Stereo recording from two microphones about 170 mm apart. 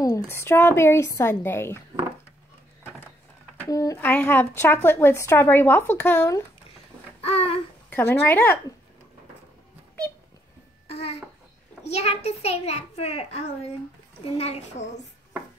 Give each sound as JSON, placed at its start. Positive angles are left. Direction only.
{"t": 0.0, "sound": "speech", "side_deg": 15}
{"t": 3.6, "sound": "speech", "side_deg": 20}
{"t": 7.2, "sound": "babbling", "side_deg": 35}
{"t": 7.9, "sound": "speech", "side_deg": 10}
{"t": 10.9, "sound": "babbling", "side_deg": 35}
{"t": 11.8, "sound": "a child's voice", "side_deg": 40}